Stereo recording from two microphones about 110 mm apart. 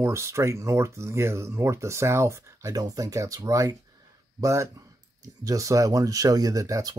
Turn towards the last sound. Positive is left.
turn(degrees=-30)  # may be behind; listen again after turning